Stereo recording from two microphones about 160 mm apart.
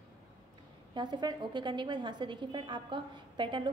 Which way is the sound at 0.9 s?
30° right (ahead or behind).